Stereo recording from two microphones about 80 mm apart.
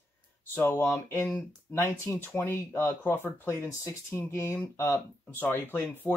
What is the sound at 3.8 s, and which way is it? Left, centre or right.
Speech, left.